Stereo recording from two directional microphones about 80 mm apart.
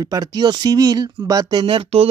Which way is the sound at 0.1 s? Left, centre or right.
Right.